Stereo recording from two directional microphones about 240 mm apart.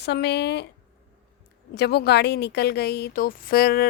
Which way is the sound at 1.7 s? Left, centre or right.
Left.